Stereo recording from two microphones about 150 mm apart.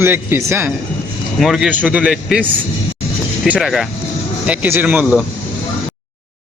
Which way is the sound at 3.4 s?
Centre (ahead or behind).